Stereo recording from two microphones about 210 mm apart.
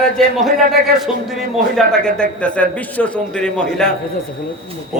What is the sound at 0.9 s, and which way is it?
A man's voice, centre (ahead or behind).